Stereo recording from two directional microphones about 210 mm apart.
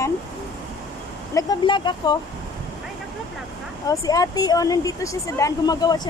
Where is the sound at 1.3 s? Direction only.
20° left (ahead or behind).